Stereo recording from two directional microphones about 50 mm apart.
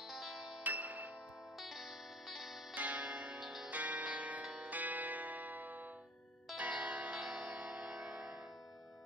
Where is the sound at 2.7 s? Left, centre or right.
Right.